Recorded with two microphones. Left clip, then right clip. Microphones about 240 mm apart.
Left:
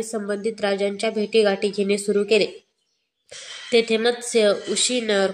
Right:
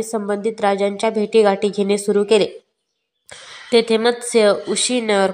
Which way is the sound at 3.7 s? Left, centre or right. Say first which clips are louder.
Right 4 dB; centre.